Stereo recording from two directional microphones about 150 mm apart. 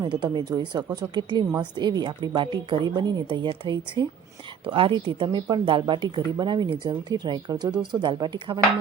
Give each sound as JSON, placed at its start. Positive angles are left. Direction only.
{"t": 0.0, "sound": "a woman's voice", "side_deg": -30}